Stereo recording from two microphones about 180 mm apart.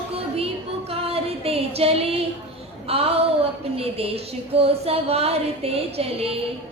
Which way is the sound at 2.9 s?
35° right (ahead or behind).